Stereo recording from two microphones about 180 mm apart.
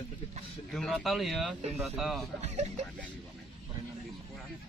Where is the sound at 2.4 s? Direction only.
35° right (ahead or behind).